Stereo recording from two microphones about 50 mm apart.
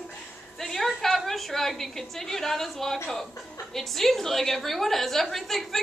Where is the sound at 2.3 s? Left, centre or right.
Centre.